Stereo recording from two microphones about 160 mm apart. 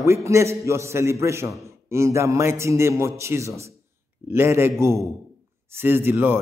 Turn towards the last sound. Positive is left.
turn(degrees=-15)  # may be behind; listen again after turning